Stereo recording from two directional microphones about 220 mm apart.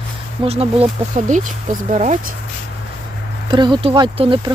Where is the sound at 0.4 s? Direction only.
25° right (ahead or behind).